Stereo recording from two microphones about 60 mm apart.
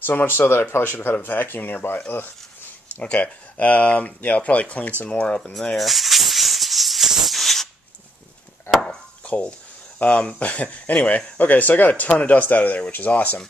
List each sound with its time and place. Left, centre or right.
0.0 s speech: left
3.0 s speech: left
5.3 s maraca: centre
8.8 s speech: left